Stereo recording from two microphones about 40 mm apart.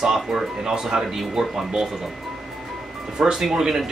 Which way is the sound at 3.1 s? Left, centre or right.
Centre.